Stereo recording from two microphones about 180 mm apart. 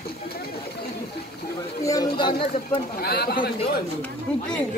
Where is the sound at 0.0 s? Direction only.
60° left (ahead or behind).